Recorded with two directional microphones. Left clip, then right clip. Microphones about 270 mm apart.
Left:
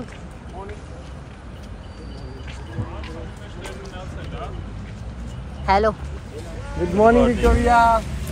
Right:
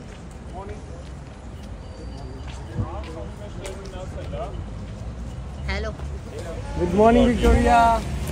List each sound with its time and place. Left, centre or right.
5.7 s speech: centre